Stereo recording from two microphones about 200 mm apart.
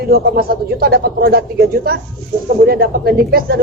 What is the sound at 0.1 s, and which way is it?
A woman's voice, 50° right (ahead or behind).